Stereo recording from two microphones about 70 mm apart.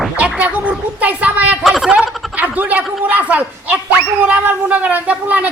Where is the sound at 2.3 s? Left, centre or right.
Right.